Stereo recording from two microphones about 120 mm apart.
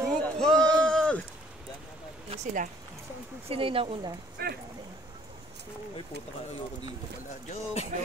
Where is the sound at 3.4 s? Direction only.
50° right (ahead or behind).